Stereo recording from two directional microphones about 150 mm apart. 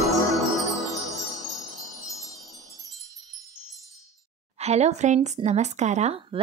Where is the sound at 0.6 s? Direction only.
Centre (ahead or behind).